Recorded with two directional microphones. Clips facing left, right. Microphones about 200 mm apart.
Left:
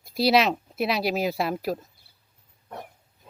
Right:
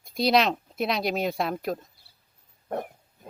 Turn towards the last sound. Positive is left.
turn(degrees=-55)  # may be behind; listen again after turning